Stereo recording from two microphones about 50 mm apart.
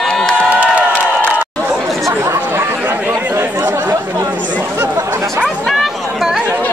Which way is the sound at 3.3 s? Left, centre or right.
Right.